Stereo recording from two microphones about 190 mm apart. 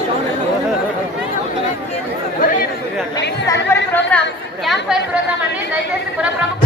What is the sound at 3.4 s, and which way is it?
Chatter, 15° left (ahead or behind).